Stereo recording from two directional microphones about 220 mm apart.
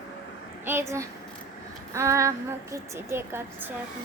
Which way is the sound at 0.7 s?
10° right (ahead or behind).